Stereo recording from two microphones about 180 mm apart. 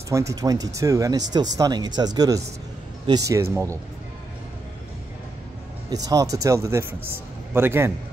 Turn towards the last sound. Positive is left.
turn(degrees=-15)  # may be behind; listen again after turning